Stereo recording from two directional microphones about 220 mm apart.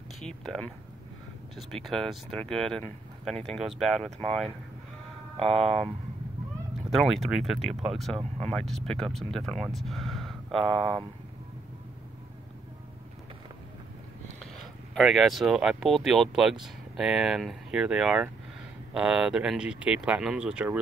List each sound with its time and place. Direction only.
0.2 s speech: centre (ahead or behind)
1.6 s speech: centre (ahead or behind)
5.6 s speech: centre (ahead or behind)
6.9 s speech: centre (ahead or behind)
14.4 s speech: centre (ahead or behind)